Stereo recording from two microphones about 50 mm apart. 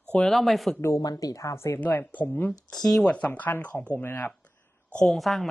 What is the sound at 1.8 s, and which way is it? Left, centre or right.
Speech, left.